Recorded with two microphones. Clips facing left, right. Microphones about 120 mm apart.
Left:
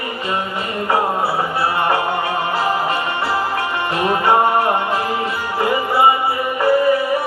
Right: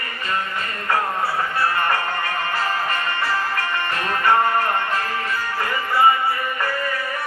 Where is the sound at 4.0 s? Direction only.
15° left (ahead or behind).